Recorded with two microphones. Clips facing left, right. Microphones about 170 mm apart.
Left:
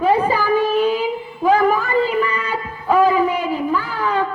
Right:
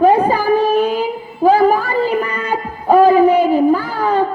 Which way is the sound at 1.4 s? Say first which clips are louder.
Right 4 dB; 35° right (ahead or behind).